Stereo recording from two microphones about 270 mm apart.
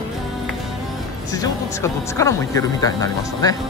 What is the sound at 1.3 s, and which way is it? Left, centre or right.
Speech, centre.